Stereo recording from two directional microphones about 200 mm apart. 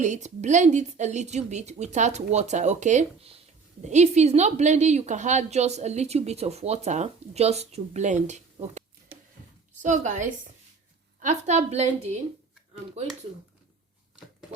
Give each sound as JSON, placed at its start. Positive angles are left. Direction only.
{"t": 0.0, "sound": "a woman's voice", "side_deg": -35}
{"t": 9.8, "sound": "a woman's voice", "side_deg": -40}